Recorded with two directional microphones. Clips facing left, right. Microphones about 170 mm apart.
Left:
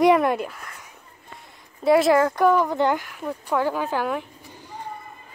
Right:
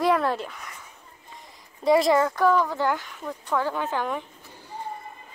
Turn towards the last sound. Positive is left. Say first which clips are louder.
# left 3 dB
turn(degrees=10)  # may be behind; listen again after turning